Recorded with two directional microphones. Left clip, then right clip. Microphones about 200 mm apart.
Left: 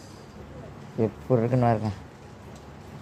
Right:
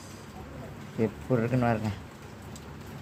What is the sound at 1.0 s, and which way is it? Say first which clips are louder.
Speech: left 4 dB; 20° left (ahead or behind).